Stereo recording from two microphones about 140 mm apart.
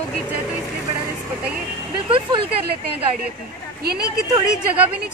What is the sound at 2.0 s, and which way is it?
Speech, 40° right (ahead or behind).